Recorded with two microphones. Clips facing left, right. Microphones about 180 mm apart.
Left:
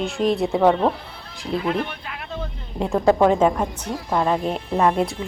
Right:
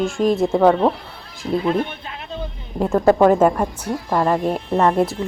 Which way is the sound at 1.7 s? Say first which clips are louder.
Right 3 dB; 25° right (ahead or behind).